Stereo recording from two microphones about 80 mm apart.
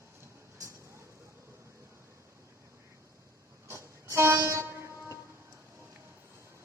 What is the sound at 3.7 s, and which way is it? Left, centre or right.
Train, right.